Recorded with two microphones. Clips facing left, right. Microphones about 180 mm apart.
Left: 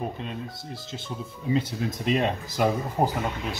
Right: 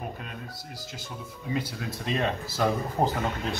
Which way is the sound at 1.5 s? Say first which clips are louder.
Left 5 dB; 25° left (ahead or behind).